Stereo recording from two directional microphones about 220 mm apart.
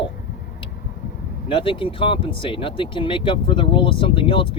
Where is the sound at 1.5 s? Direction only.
25° left (ahead or behind).